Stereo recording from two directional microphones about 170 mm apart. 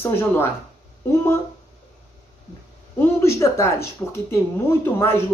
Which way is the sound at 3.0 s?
15° left (ahead or behind).